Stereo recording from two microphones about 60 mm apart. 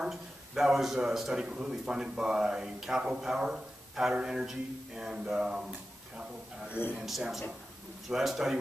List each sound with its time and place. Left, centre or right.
0.0 s a man's voice: centre
6.8 s a man's voice: left
7.1 s a man's voice: centre